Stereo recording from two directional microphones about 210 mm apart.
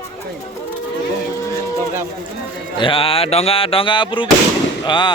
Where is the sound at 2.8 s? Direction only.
25° left (ahead or behind).